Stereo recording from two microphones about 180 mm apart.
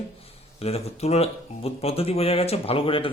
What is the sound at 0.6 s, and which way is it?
Speech, 35° left (ahead or behind).